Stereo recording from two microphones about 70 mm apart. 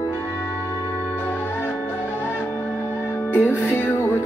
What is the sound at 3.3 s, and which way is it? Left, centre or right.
Music, left.